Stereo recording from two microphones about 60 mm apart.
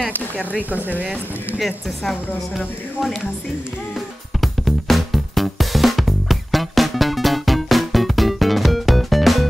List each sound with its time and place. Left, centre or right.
0.7 s speech: right
1.6 s speech: centre
4.4 s music: centre